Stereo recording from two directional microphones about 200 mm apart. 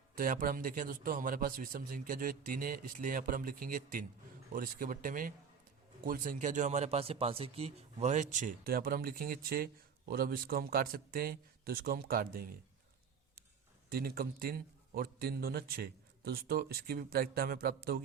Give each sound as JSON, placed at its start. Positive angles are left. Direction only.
{"t": 0.2, "sound": "a man's voice", "side_deg": -45}
{"t": 13.9, "sound": "a man's voice", "side_deg": -50}